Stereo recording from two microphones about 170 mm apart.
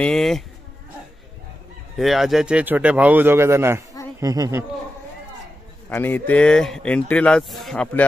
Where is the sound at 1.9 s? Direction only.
Centre (ahead or behind); by 4.6 s 20° right (ahead or behind).